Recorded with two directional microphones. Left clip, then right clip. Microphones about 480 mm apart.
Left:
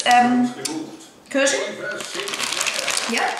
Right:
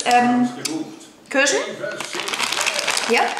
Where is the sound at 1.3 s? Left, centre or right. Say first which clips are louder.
Right 1 dB; centre.